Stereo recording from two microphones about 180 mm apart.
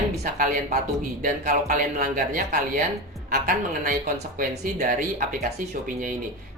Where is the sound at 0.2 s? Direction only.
50° right (ahead or behind).